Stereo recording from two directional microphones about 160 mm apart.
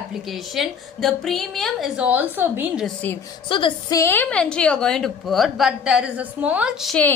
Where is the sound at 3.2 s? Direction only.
25° left (ahead or behind).